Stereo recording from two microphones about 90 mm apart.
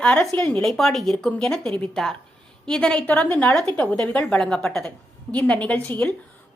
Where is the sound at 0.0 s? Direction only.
15° left (ahead or behind).